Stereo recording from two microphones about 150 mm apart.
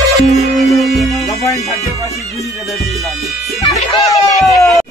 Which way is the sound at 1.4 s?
20° left (ahead or behind).